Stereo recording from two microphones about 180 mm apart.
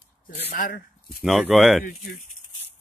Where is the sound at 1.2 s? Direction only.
Centre (ahead or behind).